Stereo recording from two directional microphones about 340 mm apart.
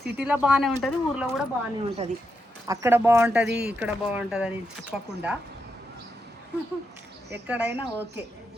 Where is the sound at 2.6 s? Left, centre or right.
Centre.